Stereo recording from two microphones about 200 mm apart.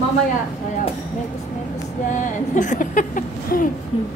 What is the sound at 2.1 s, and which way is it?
Speech, 40° left (ahead or behind).